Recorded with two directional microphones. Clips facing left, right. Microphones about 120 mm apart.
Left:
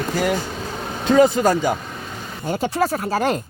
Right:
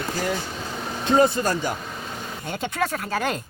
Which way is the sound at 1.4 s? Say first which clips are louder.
Left 7 dB; 90° left.